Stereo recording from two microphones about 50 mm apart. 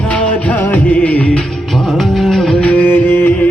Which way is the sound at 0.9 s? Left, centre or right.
Left.